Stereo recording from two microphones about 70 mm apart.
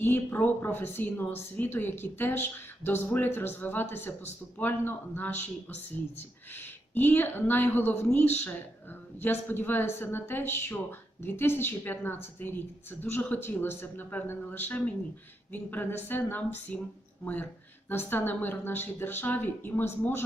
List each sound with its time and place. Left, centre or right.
0.0 s a woman's voice: left